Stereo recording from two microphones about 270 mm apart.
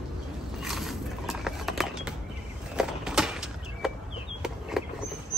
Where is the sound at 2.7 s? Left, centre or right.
Centre.